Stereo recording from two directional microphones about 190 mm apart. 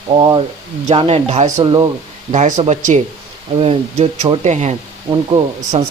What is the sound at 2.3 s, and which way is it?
Speech, 40° right (ahead or behind).